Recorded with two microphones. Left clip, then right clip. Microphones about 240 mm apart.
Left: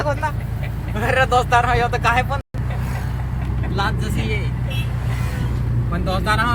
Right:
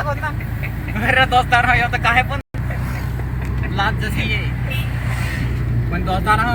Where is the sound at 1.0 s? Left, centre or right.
Left.